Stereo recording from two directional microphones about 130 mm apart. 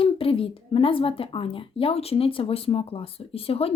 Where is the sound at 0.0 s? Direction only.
45° left (ahead or behind).